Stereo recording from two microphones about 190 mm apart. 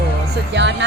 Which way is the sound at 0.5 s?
70° right (ahead or behind).